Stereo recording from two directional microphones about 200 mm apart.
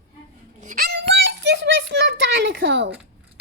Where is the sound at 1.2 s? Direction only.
60° right (ahead or behind).